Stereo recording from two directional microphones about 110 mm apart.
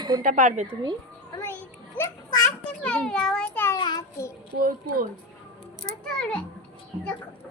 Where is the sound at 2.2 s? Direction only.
35° left (ahead or behind).